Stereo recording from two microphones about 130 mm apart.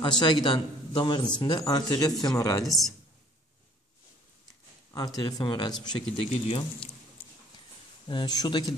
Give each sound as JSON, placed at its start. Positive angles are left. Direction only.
{"t": 0.0, "sound": "a man's voice", "side_deg": 35}
{"t": 4.9, "sound": "a man's voice", "side_deg": 30}
{"t": 6.3, "sound": "speech", "side_deg": 50}
{"t": 8.1, "sound": "a man's voice", "side_deg": 35}